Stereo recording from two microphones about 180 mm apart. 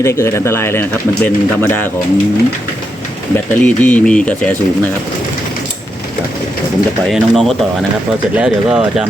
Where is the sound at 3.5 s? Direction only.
10° left (ahead or behind).